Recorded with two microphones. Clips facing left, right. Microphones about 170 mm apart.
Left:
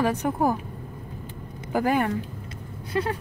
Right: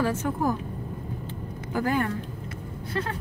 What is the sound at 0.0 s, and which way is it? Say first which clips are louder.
Speech: left 2 dB; 15° left (ahead or behind).